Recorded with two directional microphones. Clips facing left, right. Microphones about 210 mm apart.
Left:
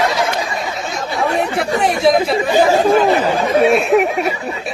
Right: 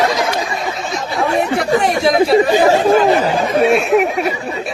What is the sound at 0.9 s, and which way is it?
Speech, centre (ahead or behind).